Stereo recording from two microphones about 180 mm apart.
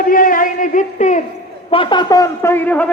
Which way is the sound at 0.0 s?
50° left (ahead or behind).